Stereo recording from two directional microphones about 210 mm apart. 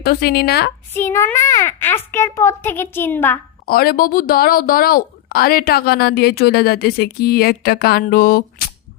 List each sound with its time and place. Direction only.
0.0 s speech: 50° left (ahead or behind)
0.9 s a child's voice: 10° left (ahead or behind)
3.7 s speech: 45° left (ahead or behind)